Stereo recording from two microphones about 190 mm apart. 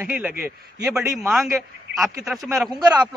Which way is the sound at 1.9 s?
Centre (ahead or behind).